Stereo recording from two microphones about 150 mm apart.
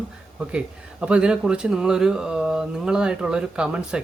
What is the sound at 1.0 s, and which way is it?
Speech, 5° right (ahead or behind).